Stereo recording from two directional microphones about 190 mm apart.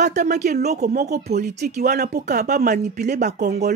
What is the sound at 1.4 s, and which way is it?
Speech, 40° right (ahead or behind).